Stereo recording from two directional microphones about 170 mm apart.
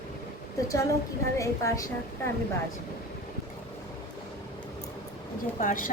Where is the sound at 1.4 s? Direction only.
20° left (ahead or behind).